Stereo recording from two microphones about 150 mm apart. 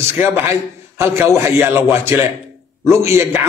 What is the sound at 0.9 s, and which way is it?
A man's voice, 15° right (ahead or behind).